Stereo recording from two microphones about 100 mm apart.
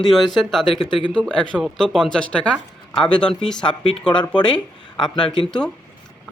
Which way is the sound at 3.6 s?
60° left (ahead or behind).